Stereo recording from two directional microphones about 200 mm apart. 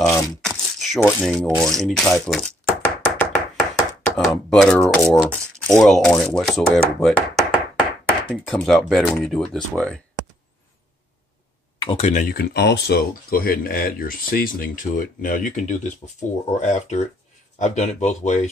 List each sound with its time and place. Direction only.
0.1 s speech: 5° left (ahead or behind)
2.0 s knock: 5° left (ahead or behind)
4.0 s speech: centre (ahead or behind)
8.5 s speech: centre (ahead or behind)
11.8 s speech: 30° left (ahead or behind)